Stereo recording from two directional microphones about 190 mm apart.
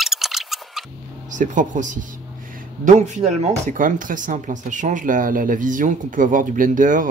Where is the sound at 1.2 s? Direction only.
40° right (ahead or behind).